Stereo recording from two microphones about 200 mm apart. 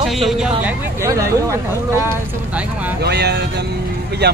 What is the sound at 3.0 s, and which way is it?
Speech, 55° right (ahead or behind).